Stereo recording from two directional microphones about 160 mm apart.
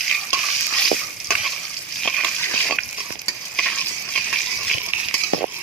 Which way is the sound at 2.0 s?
5° left (ahead or behind).